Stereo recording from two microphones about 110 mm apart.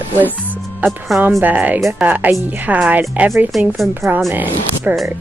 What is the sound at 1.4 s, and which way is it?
Speech, 15° right (ahead or behind).